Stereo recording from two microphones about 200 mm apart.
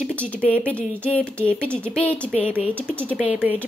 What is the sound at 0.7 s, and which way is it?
A woman's voice, 5° left (ahead or behind).